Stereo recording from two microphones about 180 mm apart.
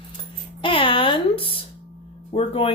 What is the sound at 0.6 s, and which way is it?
A woman's voice, 30° left (ahead or behind).